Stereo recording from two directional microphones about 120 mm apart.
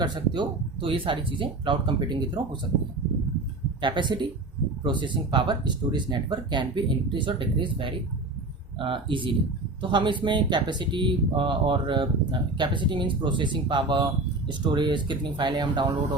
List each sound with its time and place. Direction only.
0.0 s speech: 40° right (ahead or behind)
3.8 s speech: 40° right (ahead or behind)